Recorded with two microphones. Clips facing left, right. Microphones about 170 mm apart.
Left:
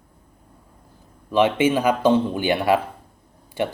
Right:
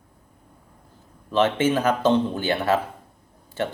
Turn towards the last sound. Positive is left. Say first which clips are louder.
# left 2 dB
turn(degrees=15)  # may be behind; listen again after turning